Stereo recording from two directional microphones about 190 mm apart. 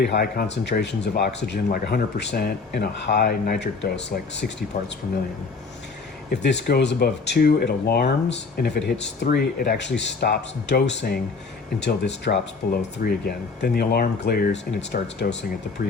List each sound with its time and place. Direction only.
0.0 s speech: 55° left (ahead or behind)
6.3 s speech: 65° left (ahead or behind)